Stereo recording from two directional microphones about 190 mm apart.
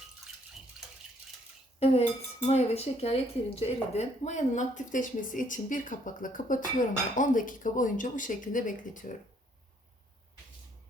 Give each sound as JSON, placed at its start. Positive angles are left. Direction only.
{"t": 1.8, "sound": "speech", "side_deg": 35}